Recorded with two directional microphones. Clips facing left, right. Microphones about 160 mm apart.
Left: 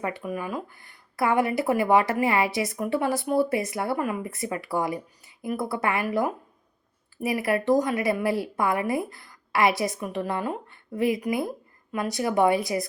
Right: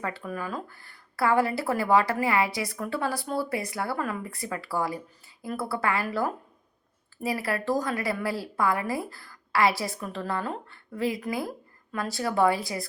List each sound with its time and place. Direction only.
0.0 s a woman's voice: 15° left (ahead or behind)